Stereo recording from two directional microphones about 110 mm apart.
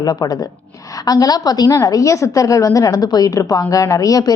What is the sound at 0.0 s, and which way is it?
A woman's voice, 35° left (ahead or behind).